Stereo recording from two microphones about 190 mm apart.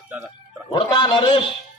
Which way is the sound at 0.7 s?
25° left (ahead or behind).